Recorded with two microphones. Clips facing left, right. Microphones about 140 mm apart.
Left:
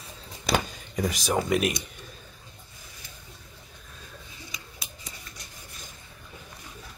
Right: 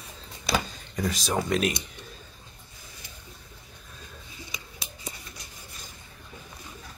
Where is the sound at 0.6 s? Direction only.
15° left (ahead or behind).